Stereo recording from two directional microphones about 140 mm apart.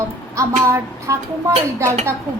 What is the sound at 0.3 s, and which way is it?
A woman's voice, 20° right (ahead or behind).